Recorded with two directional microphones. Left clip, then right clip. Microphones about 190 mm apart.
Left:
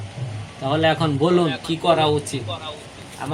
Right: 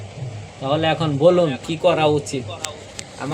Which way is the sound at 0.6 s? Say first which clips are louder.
Left 1 dB; 20° right (ahead or behind).